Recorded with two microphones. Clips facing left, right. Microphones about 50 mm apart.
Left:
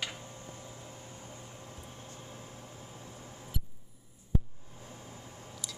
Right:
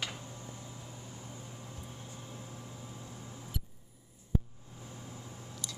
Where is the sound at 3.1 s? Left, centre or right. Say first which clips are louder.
Right 1 dB; left.